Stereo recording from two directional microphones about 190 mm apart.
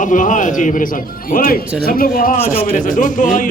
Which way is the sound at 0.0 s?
40° left (ahead or behind).